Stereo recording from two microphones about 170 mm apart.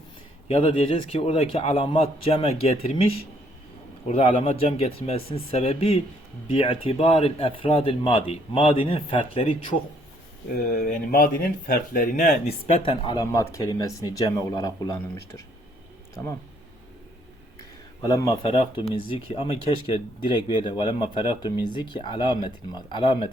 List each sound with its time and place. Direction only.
0.4 s speech: 35° left (ahead or behind)
4.4 s speech: 35° left (ahead or behind)
10.7 s speech: 50° left (ahead or behind)
12.8 s speech: 30° left (ahead or behind)
18.1 s speech: 25° left (ahead or behind)